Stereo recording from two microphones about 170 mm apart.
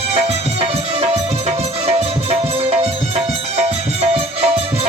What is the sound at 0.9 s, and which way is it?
Music, 40° right (ahead or behind).